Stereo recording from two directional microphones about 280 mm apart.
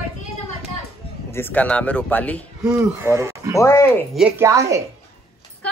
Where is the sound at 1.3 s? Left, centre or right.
Centre.